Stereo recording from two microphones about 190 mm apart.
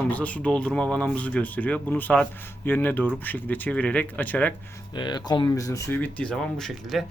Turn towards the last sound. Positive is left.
turn(degrees=0)  # may be behind; listen again after turning